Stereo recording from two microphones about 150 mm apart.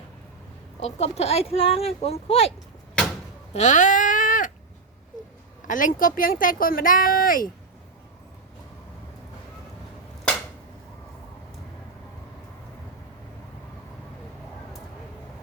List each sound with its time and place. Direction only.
0.8 s speech: 45° left (ahead or behind)
3.5 s a sound: 55° left (ahead or behind)
5.6 s speech: 60° left (ahead or behind)